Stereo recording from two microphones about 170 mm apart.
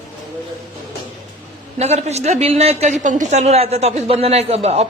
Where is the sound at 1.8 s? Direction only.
40° right (ahead or behind).